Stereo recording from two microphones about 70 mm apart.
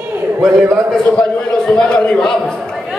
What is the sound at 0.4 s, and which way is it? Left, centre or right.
Speech, centre.